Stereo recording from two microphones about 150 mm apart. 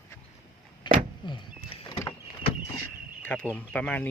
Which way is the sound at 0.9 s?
30° left (ahead or behind).